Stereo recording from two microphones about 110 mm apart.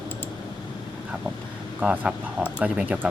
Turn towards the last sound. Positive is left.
turn(degrees=-10)  # may be behind; listen again after turning